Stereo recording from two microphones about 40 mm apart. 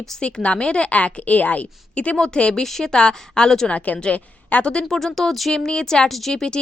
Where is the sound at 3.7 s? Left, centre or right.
Left.